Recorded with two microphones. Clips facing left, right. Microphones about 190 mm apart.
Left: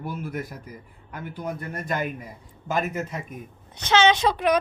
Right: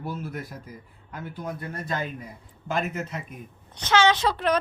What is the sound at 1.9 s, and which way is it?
Speech, 15° left (ahead or behind).